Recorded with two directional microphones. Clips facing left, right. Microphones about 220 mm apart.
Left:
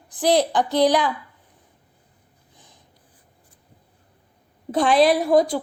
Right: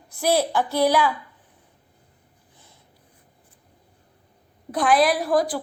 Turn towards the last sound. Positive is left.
turn(degrees=25)  # may be behind; listen again after turning